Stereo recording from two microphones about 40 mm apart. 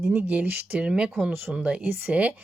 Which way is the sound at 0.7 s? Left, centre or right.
Right.